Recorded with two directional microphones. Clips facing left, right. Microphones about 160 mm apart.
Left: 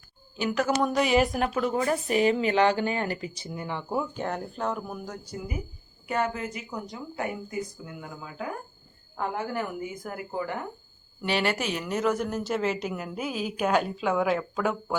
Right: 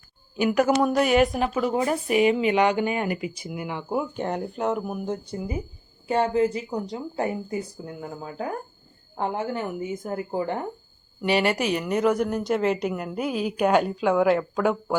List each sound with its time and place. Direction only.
0.3 s a woman's voice: 10° right (ahead or behind)
1.7 s speech: 15° right (ahead or behind); by 8.4 s 35° right (ahead or behind)
9.1 s speech: 25° right (ahead or behind)
11.2 s a woman's voice: 5° right (ahead or behind)
12.4 s a woman's voice: 5° left (ahead or behind); by 14.9 s 10° right (ahead or behind)